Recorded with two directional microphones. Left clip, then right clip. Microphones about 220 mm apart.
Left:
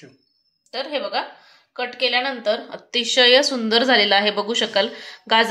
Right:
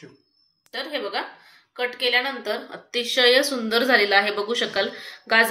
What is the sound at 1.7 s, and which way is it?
A woman's voice, 50° left (ahead or behind).